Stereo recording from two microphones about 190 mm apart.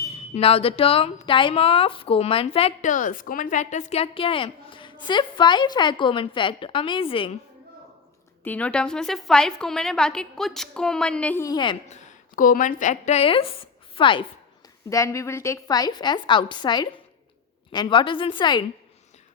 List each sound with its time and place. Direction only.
0.3 s a woman's voice: 30° left (ahead or behind)
8.4 s a woman's voice: 5° left (ahead or behind); by 11.8 s 25° left (ahead or behind)
11.9 s a woman's voice: 40° left (ahead or behind)
14.8 s a woman's voice: 15° left (ahead or behind)